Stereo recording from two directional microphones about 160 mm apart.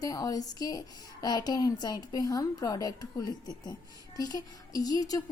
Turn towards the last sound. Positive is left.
turn(degrees=25)  # may be behind; listen again after turning